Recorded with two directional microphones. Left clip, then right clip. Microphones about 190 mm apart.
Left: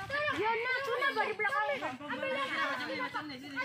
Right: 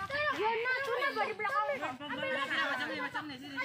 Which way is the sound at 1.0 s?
50° left (ahead or behind).